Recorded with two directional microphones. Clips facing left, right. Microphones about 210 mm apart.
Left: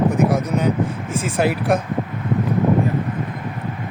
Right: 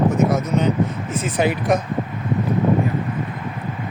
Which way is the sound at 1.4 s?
5° left (ahead or behind).